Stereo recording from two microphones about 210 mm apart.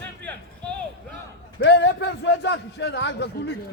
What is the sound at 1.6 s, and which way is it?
A man's voice, 55° left (ahead or behind).